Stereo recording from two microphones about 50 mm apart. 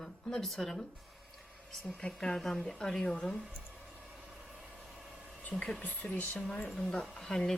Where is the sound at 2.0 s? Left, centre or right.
Centre.